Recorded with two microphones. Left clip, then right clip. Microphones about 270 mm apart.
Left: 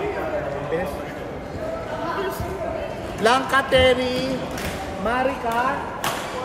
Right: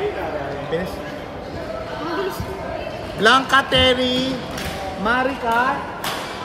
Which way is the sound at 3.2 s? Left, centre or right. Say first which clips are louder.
Right 4 dB; right.